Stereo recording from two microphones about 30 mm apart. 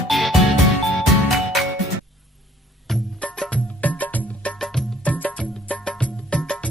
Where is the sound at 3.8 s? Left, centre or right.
Left.